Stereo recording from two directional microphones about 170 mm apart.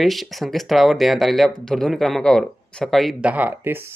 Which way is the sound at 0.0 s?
Centre (ahead or behind).